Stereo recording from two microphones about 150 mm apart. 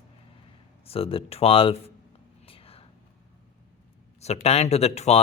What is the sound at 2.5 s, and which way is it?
Whispering, 40° left (ahead or behind).